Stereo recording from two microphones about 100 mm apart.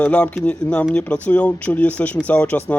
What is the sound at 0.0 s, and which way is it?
Speech, 10° left (ahead or behind).